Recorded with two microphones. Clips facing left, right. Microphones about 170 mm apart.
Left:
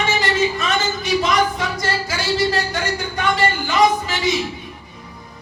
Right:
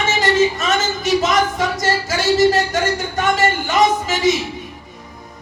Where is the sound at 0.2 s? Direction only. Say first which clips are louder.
Right 4 dB; 45° right (ahead or behind).